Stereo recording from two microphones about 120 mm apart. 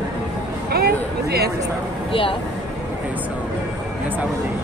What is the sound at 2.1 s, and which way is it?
Speech, 50° left (ahead or behind).